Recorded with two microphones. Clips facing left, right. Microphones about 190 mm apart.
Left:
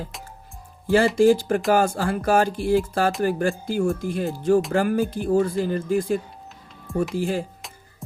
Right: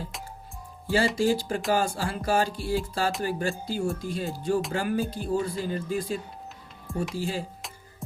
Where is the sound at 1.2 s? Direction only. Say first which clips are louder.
Left 8 dB; 55° left (ahead or behind).